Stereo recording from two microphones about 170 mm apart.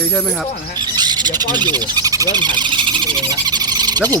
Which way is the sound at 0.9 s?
25° right (ahead or behind).